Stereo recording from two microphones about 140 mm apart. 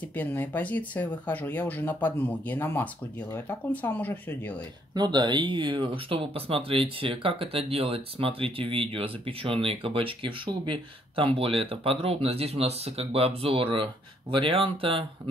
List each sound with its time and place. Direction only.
0.0 s speech: 10° left (ahead or behind)
4.9 s speech: 30° right (ahead or behind)